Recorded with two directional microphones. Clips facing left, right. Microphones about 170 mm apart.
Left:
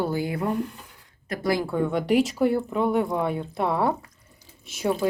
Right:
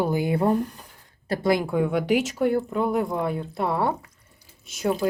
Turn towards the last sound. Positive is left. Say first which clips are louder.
# even
turn(degrees=0)  # may be behind; listen again after turning